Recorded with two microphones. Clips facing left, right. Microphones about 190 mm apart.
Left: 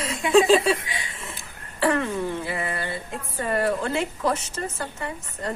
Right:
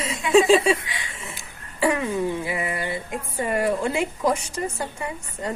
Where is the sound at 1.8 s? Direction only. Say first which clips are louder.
Right 1 dB; 10° right (ahead or behind).